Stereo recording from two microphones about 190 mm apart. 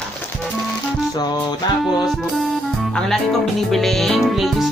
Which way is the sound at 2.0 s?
Centre (ahead or behind).